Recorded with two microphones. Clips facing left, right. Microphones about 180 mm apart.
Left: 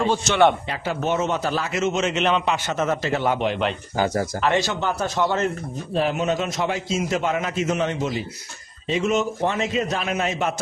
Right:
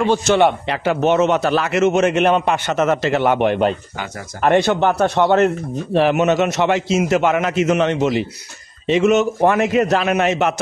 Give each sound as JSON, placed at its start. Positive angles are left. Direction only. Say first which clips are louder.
{"t": 0.1, "sound": "speech", "louder": "right 7 dB", "side_deg": -55}
{"t": 0.7, "sound": "a man's voice", "louder": "right 8 dB", "side_deg": -70}
{"t": 3.9, "sound": "speech", "louder": "left 8 dB", "side_deg": 35}
{"t": 4.4, "sound": "a man's voice", "louder": "right 10 dB", "side_deg": -55}